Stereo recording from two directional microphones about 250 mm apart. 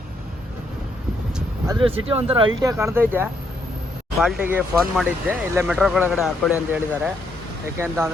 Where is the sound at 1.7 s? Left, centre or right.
Centre.